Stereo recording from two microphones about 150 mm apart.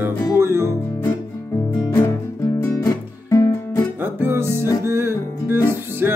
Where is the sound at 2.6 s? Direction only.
20° left (ahead or behind).